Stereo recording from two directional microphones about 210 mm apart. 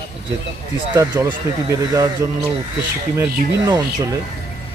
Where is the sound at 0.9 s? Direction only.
15° right (ahead or behind).